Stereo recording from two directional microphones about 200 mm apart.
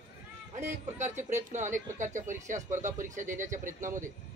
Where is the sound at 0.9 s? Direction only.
35° right (ahead or behind).